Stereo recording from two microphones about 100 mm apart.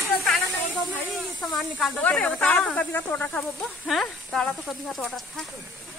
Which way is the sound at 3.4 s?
Centre (ahead or behind).